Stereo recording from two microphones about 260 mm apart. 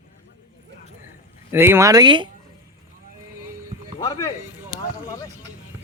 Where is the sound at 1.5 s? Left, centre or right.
Centre.